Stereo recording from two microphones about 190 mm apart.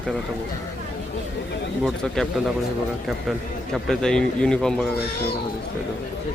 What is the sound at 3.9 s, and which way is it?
Speech, 5° left (ahead or behind).